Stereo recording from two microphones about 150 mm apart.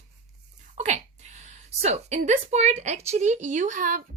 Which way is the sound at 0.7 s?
50° right (ahead or behind).